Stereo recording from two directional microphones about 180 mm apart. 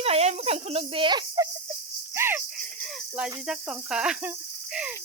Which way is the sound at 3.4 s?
5° right (ahead or behind).